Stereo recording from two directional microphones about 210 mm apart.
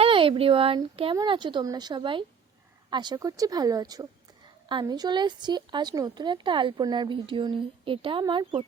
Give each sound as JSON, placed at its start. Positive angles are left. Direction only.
{"t": 0.0, "sound": "speech", "side_deg": -25}